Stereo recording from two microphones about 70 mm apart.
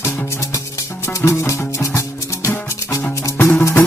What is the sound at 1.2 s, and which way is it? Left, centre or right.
Music, left.